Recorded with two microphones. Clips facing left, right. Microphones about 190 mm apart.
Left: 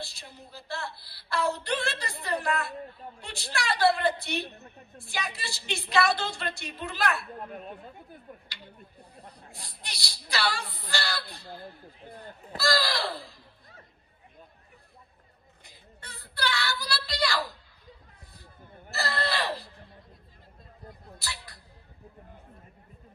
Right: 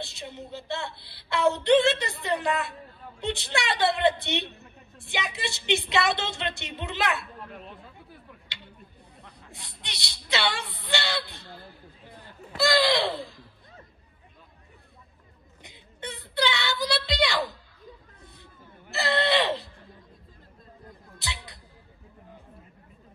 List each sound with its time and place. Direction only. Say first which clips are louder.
0.0 s a woman's voice: right 6 dB; 20° right (ahead or behind)
3.2 s a woman's voice: right 7 dB; 20° right (ahead or behind)
7.3 s speech: left 3 dB; 45° left (ahead or behind)
9.5 s a sound: right 4 dB; 25° right (ahead or behind)
10.9 s a woman's voice: right 4 dB; 25° right (ahead or behind)
12.5 s a woman's voice: right 5 dB; 20° right (ahead or behind)
15.6 s a sound: right 12 dB; 20° right (ahead or behind)